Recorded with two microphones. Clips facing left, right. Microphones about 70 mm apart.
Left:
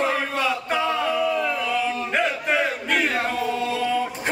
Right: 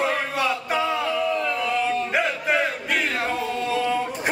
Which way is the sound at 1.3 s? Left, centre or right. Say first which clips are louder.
Left 1 dB; centre.